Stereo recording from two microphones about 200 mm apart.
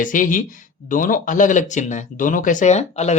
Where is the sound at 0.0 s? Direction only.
40° left (ahead or behind).